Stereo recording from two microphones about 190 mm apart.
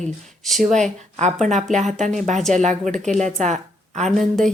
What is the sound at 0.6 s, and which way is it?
A woman's voice, 40° right (ahead or behind).